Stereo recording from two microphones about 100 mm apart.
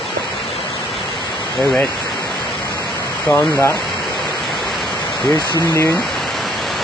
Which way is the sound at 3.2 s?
25° left (ahead or behind).